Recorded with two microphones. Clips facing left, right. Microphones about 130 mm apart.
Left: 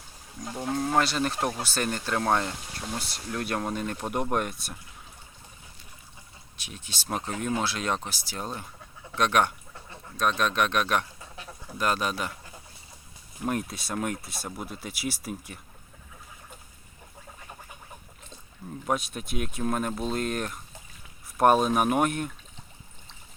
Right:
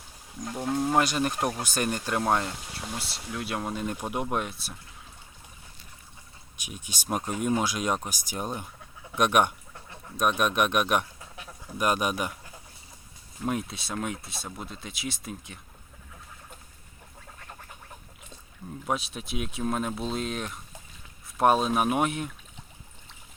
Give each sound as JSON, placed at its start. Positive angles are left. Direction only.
{"t": 0.5, "sound": "speech", "side_deg": -5}
{"t": 6.6, "sound": "speech", "side_deg": -15}
{"t": 13.4, "sound": "speech", "side_deg": 0}
{"t": 18.9, "sound": "speech", "side_deg": 0}